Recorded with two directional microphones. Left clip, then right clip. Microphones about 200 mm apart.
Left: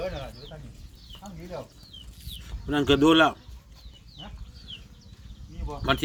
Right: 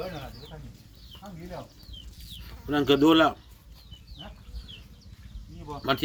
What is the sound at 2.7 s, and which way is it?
Speech, centre (ahead or behind).